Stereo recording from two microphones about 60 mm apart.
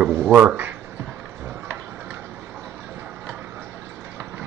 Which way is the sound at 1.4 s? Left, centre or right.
Right.